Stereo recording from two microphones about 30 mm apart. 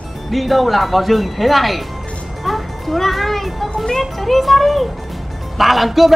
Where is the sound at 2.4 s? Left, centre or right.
Centre.